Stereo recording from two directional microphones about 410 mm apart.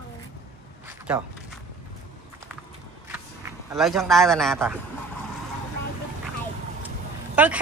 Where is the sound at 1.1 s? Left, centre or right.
Centre.